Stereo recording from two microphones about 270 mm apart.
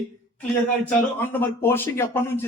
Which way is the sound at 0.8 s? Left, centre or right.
Centre.